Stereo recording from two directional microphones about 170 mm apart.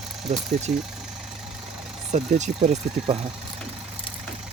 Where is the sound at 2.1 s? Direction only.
40° right (ahead or behind).